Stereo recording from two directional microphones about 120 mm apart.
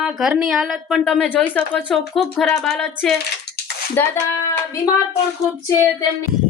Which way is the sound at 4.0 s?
15° left (ahead or behind).